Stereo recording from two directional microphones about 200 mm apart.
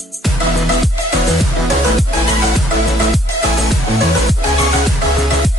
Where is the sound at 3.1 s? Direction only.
Centre (ahead or behind).